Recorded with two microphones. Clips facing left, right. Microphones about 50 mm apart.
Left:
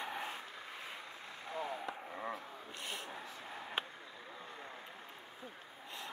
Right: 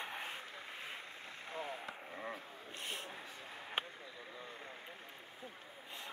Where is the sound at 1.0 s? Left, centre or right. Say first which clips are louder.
Left 1 dB; right.